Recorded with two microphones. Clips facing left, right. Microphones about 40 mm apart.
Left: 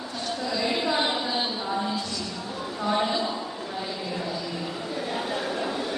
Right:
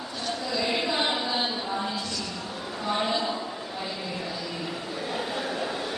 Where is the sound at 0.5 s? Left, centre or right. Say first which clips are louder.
Left 1 dB; centre.